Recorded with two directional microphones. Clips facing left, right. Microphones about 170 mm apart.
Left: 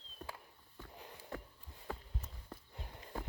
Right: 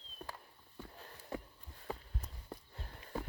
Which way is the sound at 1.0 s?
15° left (ahead or behind).